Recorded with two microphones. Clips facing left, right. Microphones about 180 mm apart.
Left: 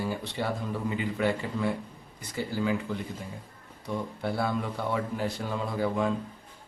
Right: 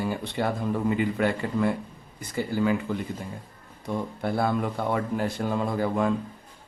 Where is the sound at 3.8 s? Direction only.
50° right (ahead or behind).